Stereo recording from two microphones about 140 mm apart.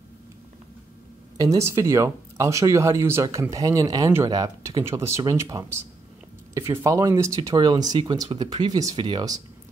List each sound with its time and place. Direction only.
1.4 s speech: 20° right (ahead or behind)